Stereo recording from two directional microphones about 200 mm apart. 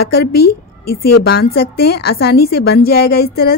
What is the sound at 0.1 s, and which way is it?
A woman's voice, 50° left (ahead or behind).